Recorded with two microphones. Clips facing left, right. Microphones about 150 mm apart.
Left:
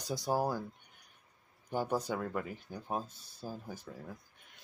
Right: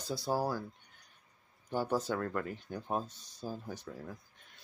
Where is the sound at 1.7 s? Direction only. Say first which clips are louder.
Right 1 dB; 15° left (ahead or behind).